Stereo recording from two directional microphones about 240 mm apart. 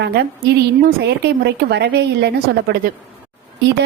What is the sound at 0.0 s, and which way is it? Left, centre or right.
A woman's voice, right.